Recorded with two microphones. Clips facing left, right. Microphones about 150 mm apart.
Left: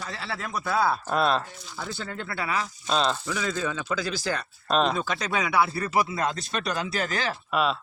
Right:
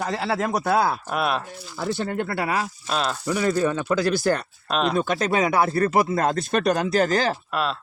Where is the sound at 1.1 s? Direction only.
10° right (ahead or behind).